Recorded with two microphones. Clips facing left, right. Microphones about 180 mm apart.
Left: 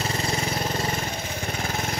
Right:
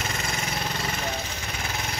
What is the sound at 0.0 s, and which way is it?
Vehicle, 35° left (ahead or behind).